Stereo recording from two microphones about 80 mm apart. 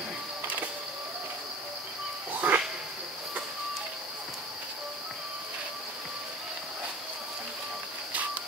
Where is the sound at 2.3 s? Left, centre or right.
Centre.